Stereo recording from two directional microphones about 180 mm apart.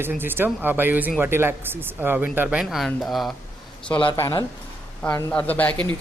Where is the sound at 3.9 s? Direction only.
20° left (ahead or behind).